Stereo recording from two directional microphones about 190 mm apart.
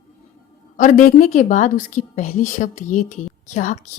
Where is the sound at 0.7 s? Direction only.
45° left (ahead or behind).